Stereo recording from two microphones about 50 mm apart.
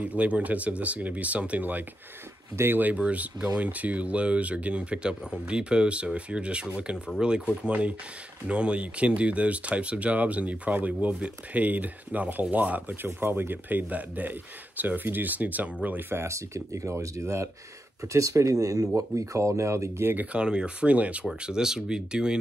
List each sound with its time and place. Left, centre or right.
0.0 s speech: right
2.5 s speech: right
3.0 s speech: right
13.0 s speech: right
16.1 s speech: right
20.3 s speech: centre
21.4 s speech: centre